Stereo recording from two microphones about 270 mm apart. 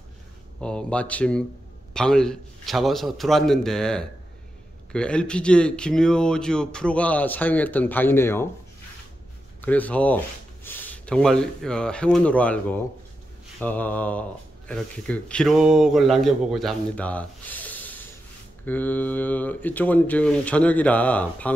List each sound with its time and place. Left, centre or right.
0.6 s speech: centre
9.6 s speech: centre
13.6 s speech: centre